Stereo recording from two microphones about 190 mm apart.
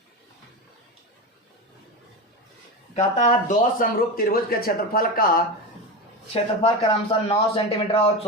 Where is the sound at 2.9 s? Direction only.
40° left (ahead or behind).